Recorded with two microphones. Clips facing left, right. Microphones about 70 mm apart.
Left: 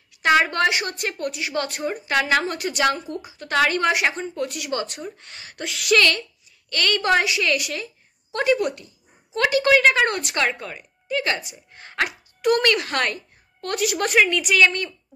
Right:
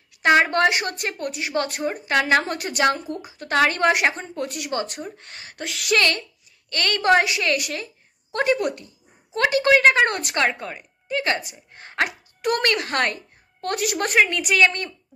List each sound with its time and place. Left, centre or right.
0.2 s speech: right
7.2 s speech: right